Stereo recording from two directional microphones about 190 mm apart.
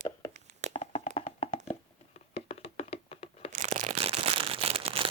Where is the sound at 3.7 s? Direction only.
30° right (ahead or behind).